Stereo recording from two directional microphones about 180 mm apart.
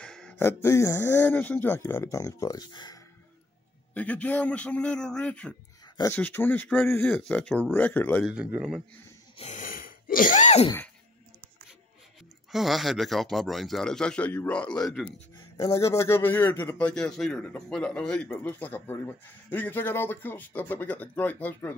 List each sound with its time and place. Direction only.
0.0 s a man's voice: 5° left (ahead or behind); by 3.0 s 20° left (ahead or behind)
3.9 s a man's voice: 10° left (ahead or behind)
8.3 s speech: 5° right (ahead or behind)
9.4 s sneeze: 45° left (ahead or behind)
12.4 s speech: centre (ahead or behind)
15.5 s a man's voice: 15° left (ahead or behind)